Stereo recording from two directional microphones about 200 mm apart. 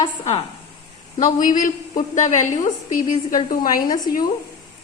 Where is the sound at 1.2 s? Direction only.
40° left (ahead or behind).